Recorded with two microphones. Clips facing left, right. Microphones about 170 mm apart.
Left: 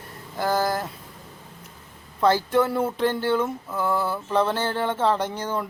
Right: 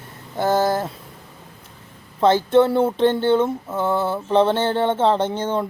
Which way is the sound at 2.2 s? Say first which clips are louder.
Right 5 dB; 25° right (ahead or behind).